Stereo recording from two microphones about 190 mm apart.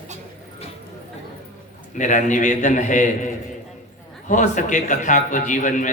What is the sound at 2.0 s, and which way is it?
A man's voice, 40° left (ahead or behind).